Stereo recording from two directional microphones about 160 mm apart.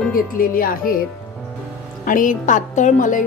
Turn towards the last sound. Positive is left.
turn(degrees=50)  # may be behind; listen again after turning